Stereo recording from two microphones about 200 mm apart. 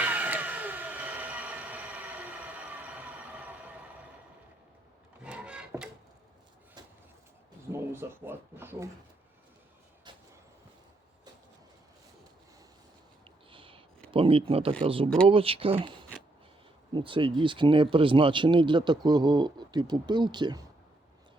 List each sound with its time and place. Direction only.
0.0 s a sound: 10° right (ahead or behind)
5.2 s wood: 5° right (ahead or behind)
6.8 s vehicle: 20° right (ahead or behind)
7.7 s speech: 10° right (ahead or behind)
13.2 s a sound: 25° right (ahead or behind)
14.1 s speech: 25° right (ahead or behind)